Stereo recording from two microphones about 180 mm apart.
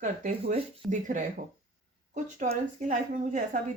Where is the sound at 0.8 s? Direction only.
45° right (ahead or behind).